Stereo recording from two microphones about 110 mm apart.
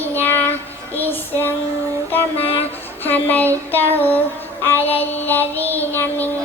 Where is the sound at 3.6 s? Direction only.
15° left (ahead or behind).